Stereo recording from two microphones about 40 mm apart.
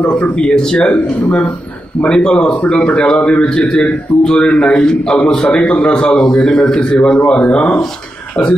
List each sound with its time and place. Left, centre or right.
0.0 s a man's voice: left